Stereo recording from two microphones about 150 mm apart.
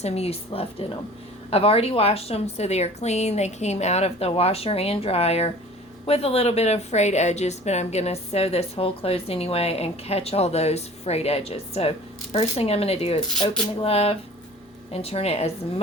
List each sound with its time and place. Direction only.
0.0 s a woman's voice: 45° left (ahead or behind)